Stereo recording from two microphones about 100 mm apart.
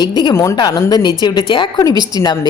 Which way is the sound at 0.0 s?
45° left (ahead or behind).